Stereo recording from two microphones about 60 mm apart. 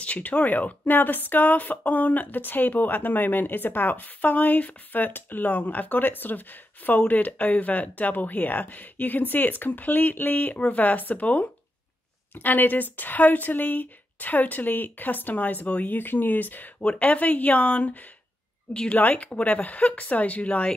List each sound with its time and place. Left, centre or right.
0.0 s a woman's voice: left